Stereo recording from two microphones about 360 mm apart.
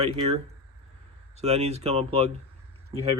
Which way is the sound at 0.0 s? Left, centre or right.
Centre.